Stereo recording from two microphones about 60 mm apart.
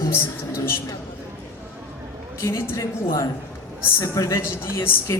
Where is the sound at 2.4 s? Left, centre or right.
Left.